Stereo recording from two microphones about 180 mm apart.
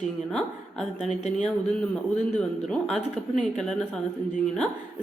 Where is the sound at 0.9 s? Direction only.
40° left (ahead or behind).